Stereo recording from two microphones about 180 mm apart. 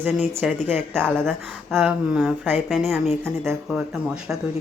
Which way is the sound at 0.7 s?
5° left (ahead or behind).